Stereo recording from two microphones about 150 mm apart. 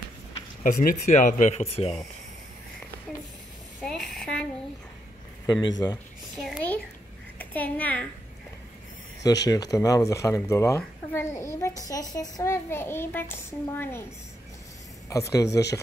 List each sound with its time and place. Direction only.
0.7 s speech: 60° left (ahead or behind); by 2.0 s 45° left (ahead or behind)
3.8 s a sound: 5° left (ahead or behind)
5.5 s speech: 25° left (ahead or behind)
7.3 s a child's voice: 10° left (ahead or behind)
9.2 s a child's voice: 25° left (ahead or behind)
15.0 s speech: 20° left (ahead or behind)